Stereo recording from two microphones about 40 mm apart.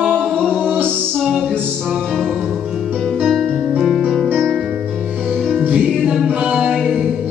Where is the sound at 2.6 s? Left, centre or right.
Centre.